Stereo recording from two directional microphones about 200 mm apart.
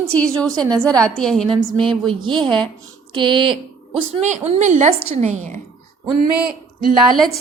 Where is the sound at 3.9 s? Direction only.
35° right (ahead or behind).